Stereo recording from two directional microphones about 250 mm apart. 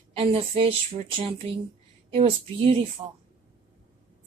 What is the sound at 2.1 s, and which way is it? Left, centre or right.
Speech, right.